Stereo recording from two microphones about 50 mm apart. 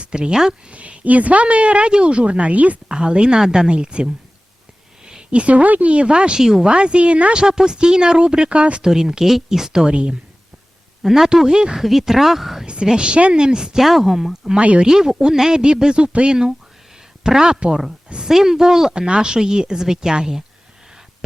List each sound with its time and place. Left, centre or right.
0.0 s speech: centre
0.7 s speech: right
2.9 s a woman's voice: centre
3.7 s a woman's voice: right
6.4 s a woman's voice: centre
6.7 s speech: centre
7.4 s a woman's voice: centre
8.9 s a woman's voice: centre
11.0 s a woman's voice: centre
12.6 s a woman's voice: centre
14.5 s a woman's voice: right